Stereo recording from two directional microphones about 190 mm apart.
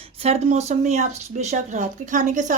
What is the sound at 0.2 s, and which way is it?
Speech, 35° right (ahead or behind).